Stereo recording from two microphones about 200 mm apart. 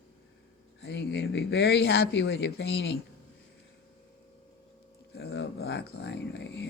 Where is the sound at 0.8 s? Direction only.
55° left (ahead or behind).